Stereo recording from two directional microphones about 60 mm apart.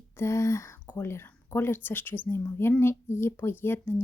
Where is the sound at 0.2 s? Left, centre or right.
Left.